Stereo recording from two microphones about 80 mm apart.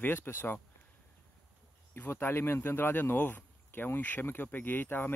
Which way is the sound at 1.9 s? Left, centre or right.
Left.